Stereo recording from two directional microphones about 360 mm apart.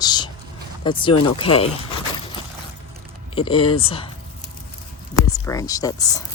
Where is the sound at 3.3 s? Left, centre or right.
Centre.